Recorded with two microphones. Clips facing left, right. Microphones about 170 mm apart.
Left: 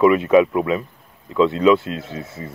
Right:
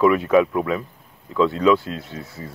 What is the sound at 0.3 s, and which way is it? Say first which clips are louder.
Speech: left 3 dB; 15° left (ahead or behind).